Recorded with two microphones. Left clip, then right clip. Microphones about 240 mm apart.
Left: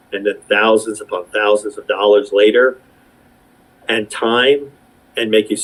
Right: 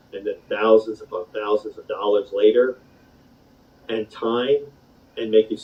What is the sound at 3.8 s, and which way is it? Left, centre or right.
Speech, left.